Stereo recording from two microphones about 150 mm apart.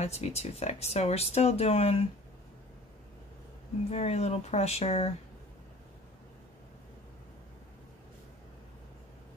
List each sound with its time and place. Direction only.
0.0 s speech: 45° left (ahead or behind)
3.9 s speech: 45° left (ahead or behind)